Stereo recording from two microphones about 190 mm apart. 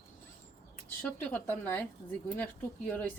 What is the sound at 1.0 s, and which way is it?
Speech, 10° left (ahead or behind).